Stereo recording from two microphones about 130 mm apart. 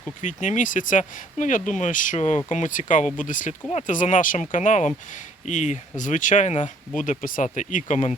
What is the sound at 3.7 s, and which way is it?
Speech, 75° left (ahead or behind).